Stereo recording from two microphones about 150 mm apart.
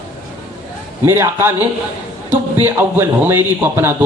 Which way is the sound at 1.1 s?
15° right (ahead or behind).